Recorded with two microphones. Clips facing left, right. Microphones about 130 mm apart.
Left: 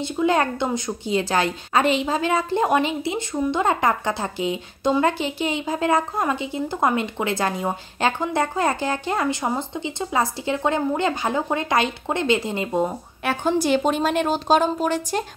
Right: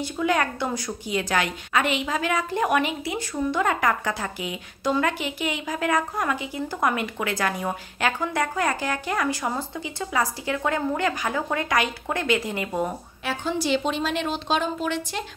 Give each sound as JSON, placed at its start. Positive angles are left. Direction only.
{"t": 0.0, "sound": "a woman's voice", "side_deg": 25}
{"t": 13.2, "sound": "a woman's voice", "side_deg": 55}